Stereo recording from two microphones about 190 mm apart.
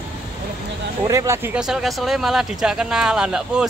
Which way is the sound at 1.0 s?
15° right (ahead or behind).